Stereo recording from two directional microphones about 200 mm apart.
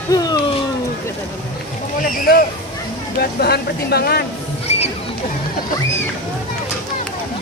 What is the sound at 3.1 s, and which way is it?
Speech, 55° left (ahead or behind).